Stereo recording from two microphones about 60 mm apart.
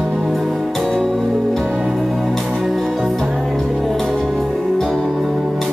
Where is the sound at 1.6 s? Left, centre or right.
Centre.